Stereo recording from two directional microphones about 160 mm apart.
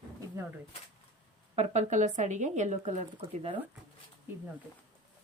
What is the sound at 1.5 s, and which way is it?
Speech, 45° right (ahead or behind).